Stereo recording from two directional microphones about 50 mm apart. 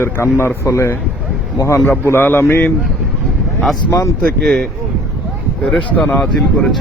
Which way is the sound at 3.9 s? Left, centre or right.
Left.